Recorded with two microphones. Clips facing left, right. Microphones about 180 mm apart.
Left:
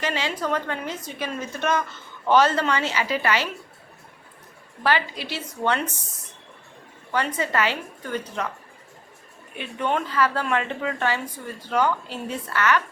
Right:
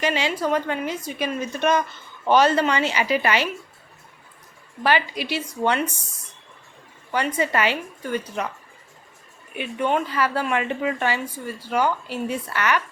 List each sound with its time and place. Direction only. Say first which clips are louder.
0.0 s a woman's voice: right 4 dB; 15° right (ahead or behind)
4.8 s a woman's voice: right 2 dB; 15° right (ahead or behind)
7.1 s a woman's voice: right 2 dB; 15° right (ahead or behind)
9.6 s a woman's voice: right 3 dB; 10° right (ahead or behind)